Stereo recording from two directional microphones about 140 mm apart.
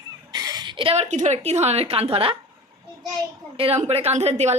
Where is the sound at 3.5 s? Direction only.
40° right (ahead or behind).